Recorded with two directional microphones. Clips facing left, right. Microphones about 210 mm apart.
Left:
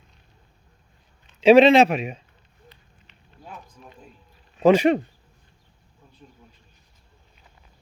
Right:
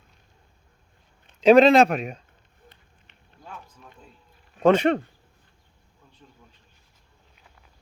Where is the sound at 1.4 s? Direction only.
Centre (ahead or behind).